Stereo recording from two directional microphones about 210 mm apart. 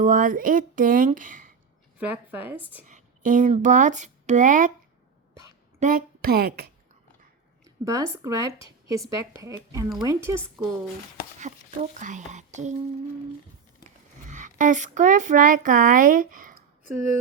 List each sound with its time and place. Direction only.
0.0 s speech: 40° right (ahead or behind)
2.0 s speech: 10° right (ahead or behind)
2.8 s speech: 40° right (ahead or behind)
5.8 s speech: 40° right (ahead or behind)
7.6 s speech: 15° right (ahead or behind)
11.3 s speech: 35° right (ahead or behind)
14.3 s speech: 35° right (ahead or behind)